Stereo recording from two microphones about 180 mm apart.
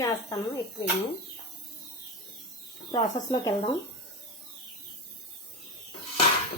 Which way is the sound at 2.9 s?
20° left (ahead or behind).